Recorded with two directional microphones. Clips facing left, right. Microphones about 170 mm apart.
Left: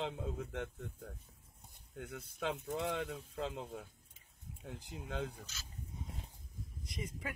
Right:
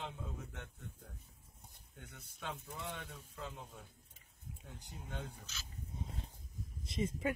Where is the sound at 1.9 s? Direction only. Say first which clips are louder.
Left 11 dB; 65° left (ahead or behind).